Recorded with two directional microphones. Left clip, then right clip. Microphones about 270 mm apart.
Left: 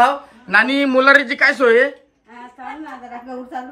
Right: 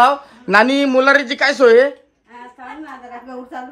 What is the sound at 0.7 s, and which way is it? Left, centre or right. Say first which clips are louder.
A woman's voice: even; centre.